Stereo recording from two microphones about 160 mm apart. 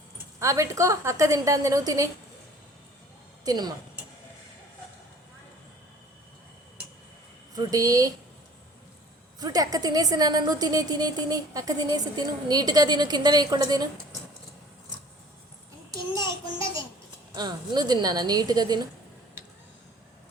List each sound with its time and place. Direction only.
0.3 s a woman's voice: 20° right (ahead or behind)
3.4 s a woman's voice: 25° right (ahead or behind)
7.5 s a woman's voice: 20° right (ahead or behind)
9.4 s a woman's voice: 25° right (ahead or behind)
16.1 s a child's voice: 25° left (ahead or behind)
17.3 s a woman's voice: 25° right (ahead or behind)